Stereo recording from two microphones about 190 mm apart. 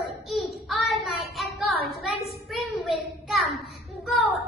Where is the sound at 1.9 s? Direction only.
Centre (ahead or behind).